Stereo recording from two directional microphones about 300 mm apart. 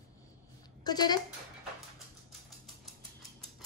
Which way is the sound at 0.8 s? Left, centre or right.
Centre.